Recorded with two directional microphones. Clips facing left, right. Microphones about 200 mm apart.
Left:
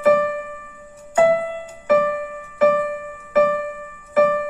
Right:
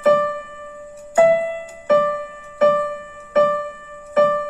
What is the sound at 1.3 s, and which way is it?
Music, 25° right (ahead or behind).